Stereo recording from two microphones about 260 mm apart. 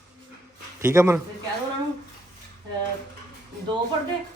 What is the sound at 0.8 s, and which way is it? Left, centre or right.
Speech, centre.